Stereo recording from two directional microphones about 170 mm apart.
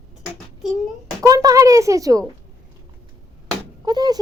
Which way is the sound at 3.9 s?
25° right (ahead or behind).